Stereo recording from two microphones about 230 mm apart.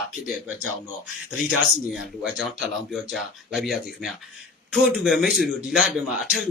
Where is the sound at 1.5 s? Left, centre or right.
Centre.